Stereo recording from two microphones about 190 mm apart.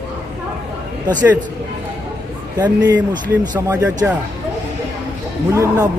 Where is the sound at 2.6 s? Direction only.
20° right (ahead or behind).